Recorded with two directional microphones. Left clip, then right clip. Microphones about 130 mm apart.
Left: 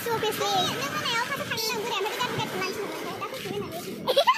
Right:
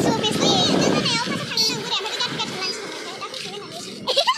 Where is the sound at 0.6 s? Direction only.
60° left (ahead or behind).